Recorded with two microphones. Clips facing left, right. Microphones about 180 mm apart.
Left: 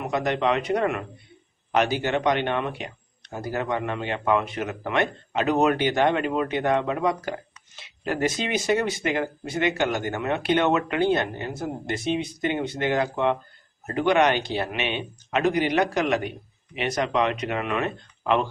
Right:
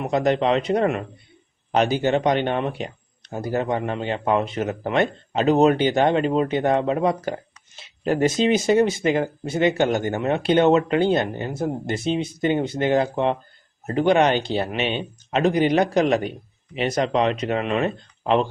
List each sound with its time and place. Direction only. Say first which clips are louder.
0.0 s speech: right 4 dB; 25° right (ahead or behind)